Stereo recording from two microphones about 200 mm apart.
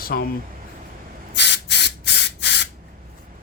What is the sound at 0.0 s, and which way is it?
Speech, 50° left (ahead or behind).